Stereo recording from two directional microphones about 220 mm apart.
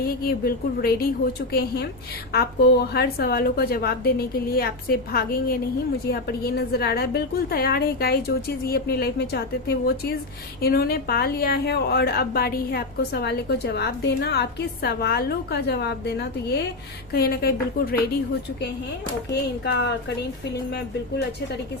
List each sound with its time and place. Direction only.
0.0 s a woman's voice: 45° left (ahead or behind)
2.3 s a woman's voice: 45° left (ahead or behind)
19.3 s a woman's voice: 50° left (ahead or behind)